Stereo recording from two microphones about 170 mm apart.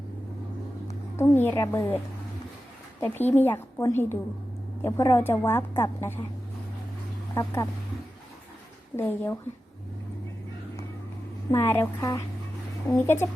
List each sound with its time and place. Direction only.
1.1 s a woman's voice: 15° left (ahead or behind)
3.0 s a woman's voice: 10° left (ahead or behind)
7.3 s speech: 20° left (ahead or behind)
9.0 s a woman's voice: 15° left (ahead or behind)
11.5 s a woman's voice: 15° left (ahead or behind)